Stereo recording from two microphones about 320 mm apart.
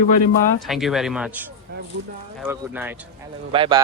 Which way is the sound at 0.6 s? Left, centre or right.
Centre.